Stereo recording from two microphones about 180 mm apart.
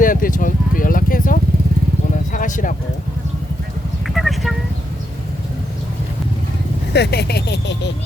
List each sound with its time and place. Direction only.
0.0 s vehicle: 50° left (ahead or behind)
2.3 s a sound: 45° left (ahead or behind)
4.0 s clip-clop: centre (ahead or behind)
6.9 s speech: 65° left (ahead or behind)